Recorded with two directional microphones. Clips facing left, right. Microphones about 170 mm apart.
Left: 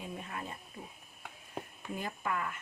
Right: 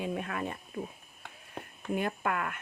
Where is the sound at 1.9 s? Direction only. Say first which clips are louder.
Right 6 dB; 65° right (ahead or behind).